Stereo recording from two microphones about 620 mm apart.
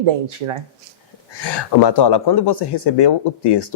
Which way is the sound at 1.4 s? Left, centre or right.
Left.